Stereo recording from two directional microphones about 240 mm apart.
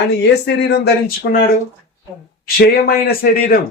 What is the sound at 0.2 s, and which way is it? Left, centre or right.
Speech, left.